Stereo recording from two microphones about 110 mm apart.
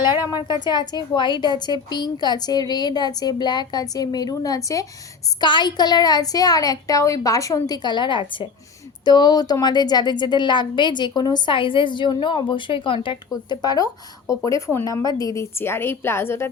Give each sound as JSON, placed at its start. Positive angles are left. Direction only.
{"t": 0.6, "sound": "a woman's voice", "side_deg": 40}
{"t": 5.4, "sound": "a woman's voice", "side_deg": 45}
{"t": 13.3, "sound": "a woman's voice", "side_deg": 35}